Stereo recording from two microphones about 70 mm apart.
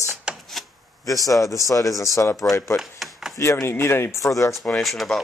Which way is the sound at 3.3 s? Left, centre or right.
Left.